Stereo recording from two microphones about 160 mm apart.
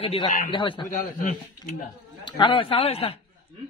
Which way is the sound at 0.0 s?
35° left (ahead or behind).